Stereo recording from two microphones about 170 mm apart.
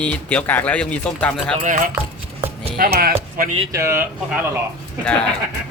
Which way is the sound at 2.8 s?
65° right (ahead or behind).